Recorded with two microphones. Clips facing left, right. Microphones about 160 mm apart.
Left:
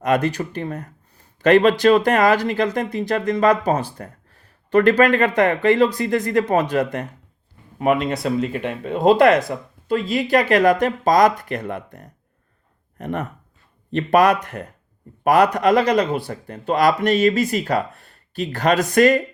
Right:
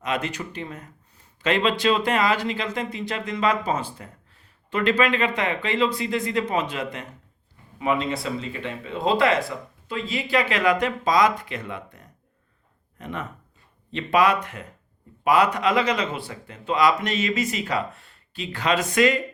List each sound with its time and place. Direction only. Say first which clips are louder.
0.0 s speech: left 8 dB; 40° left (ahead or behind)
0.5 s speech: left 7 dB; 55° left (ahead or behind)
1.5 s speech: left 8 dB; 45° left (ahead or behind)
3.9 s speech: left 6 dB; 50° left (ahead or behind)
13.9 s speech: left 5 dB; 45° left (ahead or behind)